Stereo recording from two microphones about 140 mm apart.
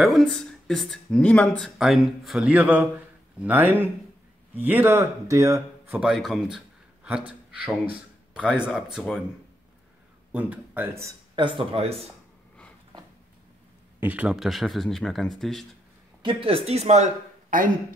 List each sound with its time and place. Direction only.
0.0 s speech: centre (ahead or behind); by 5.9 s 20° right (ahead or behind)
5.9 s a man's voice: 5° right (ahead or behind)
10.3 s speech: 10° right (ahead or behind)
11.3 s speech: 35° right (ahead or behind)
13.9 s speech: 10° right (ahead or behind)
16.2 s speech: 35° right (ahead or behind); by 17.6 s 65° right (ahead or behind)